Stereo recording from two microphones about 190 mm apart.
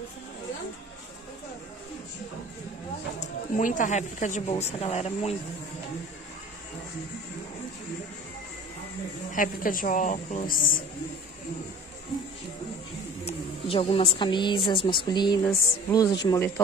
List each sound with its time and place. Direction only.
3.2 s speech: 40° left (ahead or behind)
9.3 s a woman's voice: 45° left (ahead or behind)
13.2 s a woman's voice: 30° left (ahead or behind)
15.4 s music: 15° left (ahead or behind)